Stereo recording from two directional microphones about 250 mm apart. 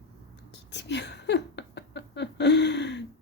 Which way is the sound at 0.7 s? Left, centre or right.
Left.